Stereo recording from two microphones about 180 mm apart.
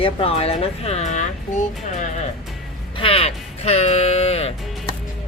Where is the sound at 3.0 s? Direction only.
30° left (ahead or behind).